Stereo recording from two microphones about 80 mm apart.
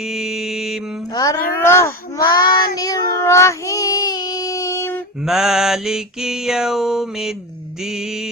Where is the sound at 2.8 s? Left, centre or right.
Left.